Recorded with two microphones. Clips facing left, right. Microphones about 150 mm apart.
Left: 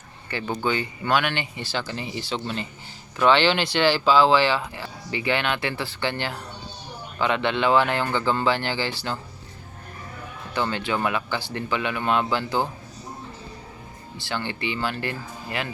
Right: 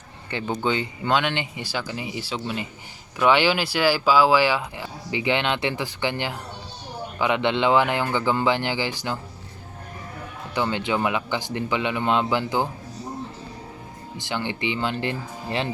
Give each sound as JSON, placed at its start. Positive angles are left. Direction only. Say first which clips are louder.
{"t": 0.3, "sound": "speech", "louder": "right 1 dB", "side_deg": -20}
{"t": 10.5, "sound": "speech", "louder": "right 1 dB", "side_deg": -15}
{"t": 14.2, "sound": "speech", "louder": "right 2 dB", "side_deg": -15}